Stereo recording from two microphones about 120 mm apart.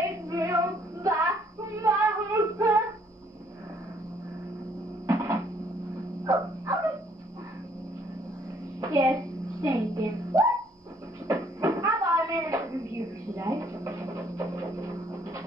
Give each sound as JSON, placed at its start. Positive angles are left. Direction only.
{"t": 0.3, "sound": "female singing", "side_deg": -25}
{"t": 1.0, "sound": "child singing", "side_deg": -25}
{"t": 1.8, "sound": "female singing", "side_deg": -25}
{"t": 5.0, "sound": "a sound", "side_deg": -25}
{"t": 6.2, "sound": "dog", "side_deg": -25}
{"t": 8.8, "sound": "music", "side_deg": -30}
{"t": 11.2, "sound": "a sound", "side_deg": -25}